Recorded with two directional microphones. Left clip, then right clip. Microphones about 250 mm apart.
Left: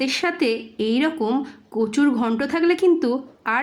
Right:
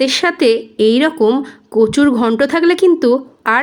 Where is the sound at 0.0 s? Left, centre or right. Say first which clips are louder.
Right 9 dB; centre.